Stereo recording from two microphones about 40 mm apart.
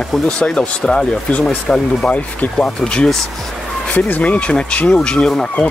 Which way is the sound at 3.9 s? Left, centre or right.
Left.